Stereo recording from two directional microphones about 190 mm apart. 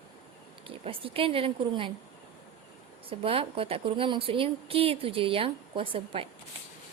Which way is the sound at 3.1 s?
30° right (ahead or behind).